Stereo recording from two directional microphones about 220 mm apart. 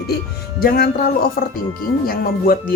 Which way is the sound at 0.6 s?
40° left (ahead or behind).